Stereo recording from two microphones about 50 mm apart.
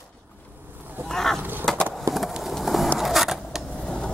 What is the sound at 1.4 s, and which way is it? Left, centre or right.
Skateboard, right.